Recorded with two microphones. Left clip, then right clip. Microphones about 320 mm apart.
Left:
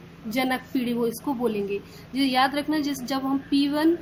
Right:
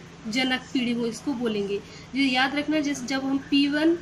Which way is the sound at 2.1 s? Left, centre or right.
Centre.